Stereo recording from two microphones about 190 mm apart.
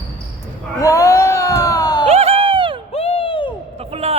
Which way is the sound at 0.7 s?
15° left (ahead or behind).